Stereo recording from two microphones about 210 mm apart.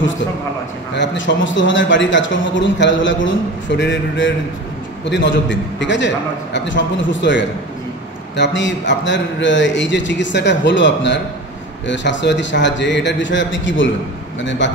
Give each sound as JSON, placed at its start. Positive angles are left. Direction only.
{"t": 0.9, "sound": "speech", "side_deg": 60}